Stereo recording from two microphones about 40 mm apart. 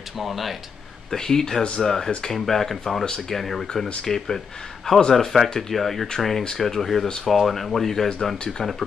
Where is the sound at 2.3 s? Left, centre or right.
Centre.